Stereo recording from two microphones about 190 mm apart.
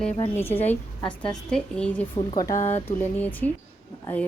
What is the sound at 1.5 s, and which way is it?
Speech, 5° left (ahead or behind).